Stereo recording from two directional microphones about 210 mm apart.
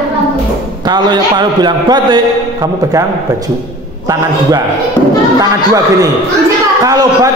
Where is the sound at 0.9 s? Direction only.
20° right (ahead or behind).